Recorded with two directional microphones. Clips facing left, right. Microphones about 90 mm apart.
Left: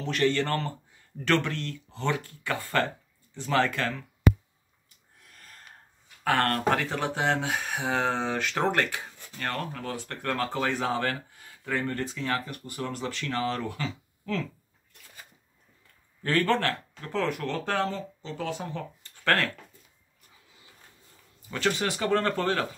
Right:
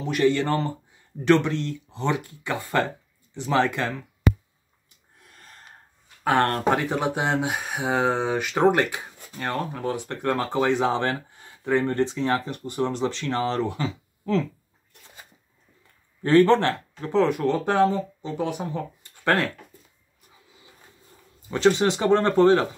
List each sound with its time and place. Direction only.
0.0 s speech: 15° right (ahead or behind)
5.2 s gasp: 30° right (ahead or behind)
6.2 s speech: 20° right (ahead or behind)
16.2 s speech: 25° right (ahead or behind)
21.5 s speech: 25° right (ahead or behind)